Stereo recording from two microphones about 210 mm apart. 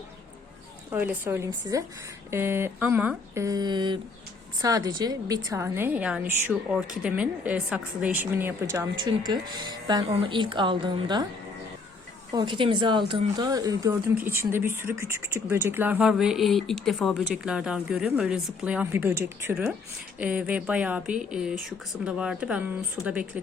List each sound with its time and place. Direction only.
0.9 s a woman's voice: 10° right (ahead or behind)
12.3 s speech: 20° right (ahead or behind); by 23.4 s 5° right (ahead or behind)